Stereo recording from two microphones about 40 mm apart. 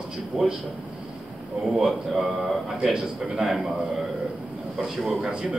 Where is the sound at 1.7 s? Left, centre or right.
Centre.